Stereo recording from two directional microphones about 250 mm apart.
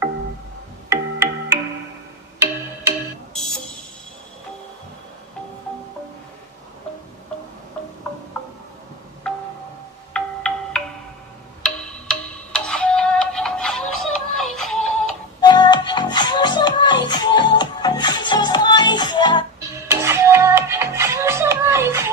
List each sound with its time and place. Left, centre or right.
0.8 s music: centre
3.3 s music: centre
9.3 s wind chime: centre
10.1 s music: centre
15.4 s music: centre
19.9 s music: centre